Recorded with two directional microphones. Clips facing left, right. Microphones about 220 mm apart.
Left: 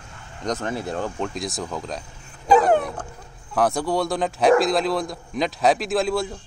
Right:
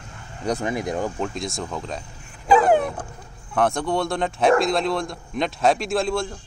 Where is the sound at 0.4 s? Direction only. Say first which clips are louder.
Right 2 dB; 10° right (ahead or behind).